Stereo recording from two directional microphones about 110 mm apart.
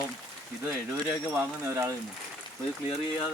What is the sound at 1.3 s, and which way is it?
Speech, 25° right (ahead or behind).